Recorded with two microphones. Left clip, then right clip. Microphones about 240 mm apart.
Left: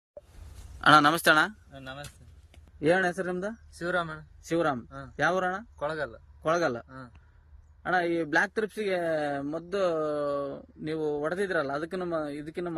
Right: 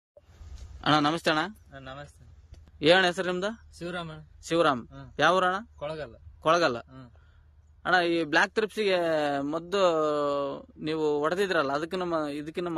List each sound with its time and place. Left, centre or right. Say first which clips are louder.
0.7 s a man's voice: left 5 dB; centre
1.7 s speech: even; centre
2.8 s a man's voice: right 4 dB; centre
3.7 s speech: left 6 dB; centre
4.4 s speech: right 4 dB; centre
5.8 s speech: left 4 dB; centre
6.4 s speech: right 3 dB; centre